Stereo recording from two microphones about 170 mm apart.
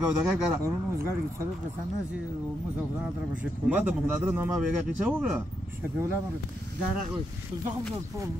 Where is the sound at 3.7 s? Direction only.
10° right (ahead or behind).